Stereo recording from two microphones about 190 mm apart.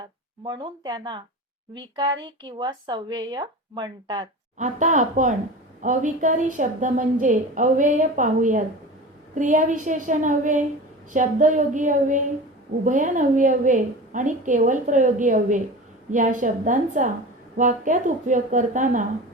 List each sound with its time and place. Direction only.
0.4 s speech: 20° right (ahead or behind)
2.2 s speech: 25° right (ahead or behind)
4.5 s a woman's voice: 40° right (ahead or behind)